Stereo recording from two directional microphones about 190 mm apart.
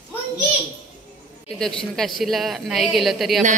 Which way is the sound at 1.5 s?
5° left (ahead or behind).